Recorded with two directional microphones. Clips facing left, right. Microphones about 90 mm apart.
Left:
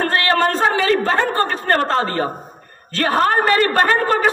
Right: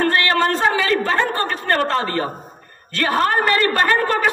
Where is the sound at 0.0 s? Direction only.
35° left (ahead or behind).